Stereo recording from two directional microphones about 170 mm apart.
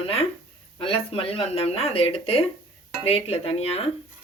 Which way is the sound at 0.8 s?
30° left (ahead or behind).